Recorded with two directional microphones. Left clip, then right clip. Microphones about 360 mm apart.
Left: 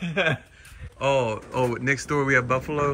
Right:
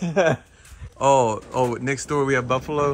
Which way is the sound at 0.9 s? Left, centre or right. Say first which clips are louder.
Right 5 dB; centre.